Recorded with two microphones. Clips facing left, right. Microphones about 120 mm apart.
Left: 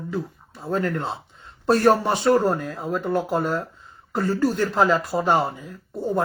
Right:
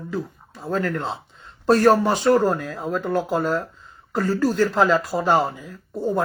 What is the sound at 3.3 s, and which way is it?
Speech, 15° left (ahead or behind).